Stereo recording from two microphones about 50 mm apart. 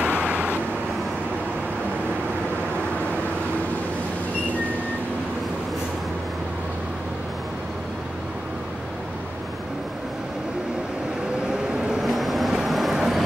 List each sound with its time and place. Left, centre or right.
0.0 s vehicle: right
12.0 s vehicle: centre
12.9 s a sound: centre